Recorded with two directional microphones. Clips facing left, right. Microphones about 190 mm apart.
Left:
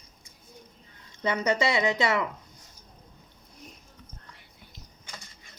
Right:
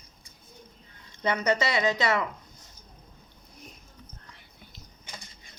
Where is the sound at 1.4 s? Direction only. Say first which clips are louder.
Left 1 dB; 25° left (ahead or behind).